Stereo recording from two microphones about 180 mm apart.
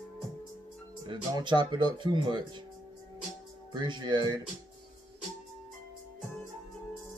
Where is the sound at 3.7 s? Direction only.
25° right (ahead or behind).